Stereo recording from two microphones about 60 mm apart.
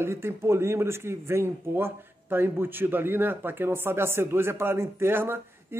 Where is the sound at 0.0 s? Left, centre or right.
Right.